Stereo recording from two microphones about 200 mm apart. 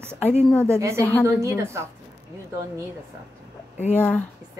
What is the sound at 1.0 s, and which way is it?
Speech, 5° left (ahead or behind).